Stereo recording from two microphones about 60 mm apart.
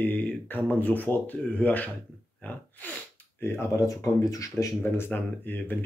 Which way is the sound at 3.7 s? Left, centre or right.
Left.